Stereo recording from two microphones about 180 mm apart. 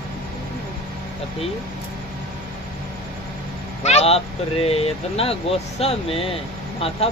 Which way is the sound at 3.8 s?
35° left (ahead or behind).